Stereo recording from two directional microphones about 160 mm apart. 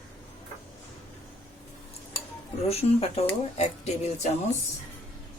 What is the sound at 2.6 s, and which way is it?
Speech, 40° left (ahead or behind).